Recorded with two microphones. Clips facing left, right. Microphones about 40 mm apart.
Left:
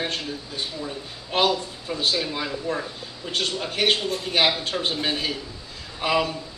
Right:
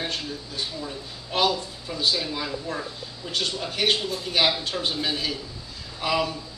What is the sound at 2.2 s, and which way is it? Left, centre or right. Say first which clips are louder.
Speech: left 2 dB; centre.